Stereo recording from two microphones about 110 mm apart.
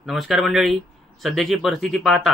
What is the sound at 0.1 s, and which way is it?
Mantra, centre (ahead or behind).